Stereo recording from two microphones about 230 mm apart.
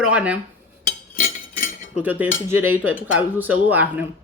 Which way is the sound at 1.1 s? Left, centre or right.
Left.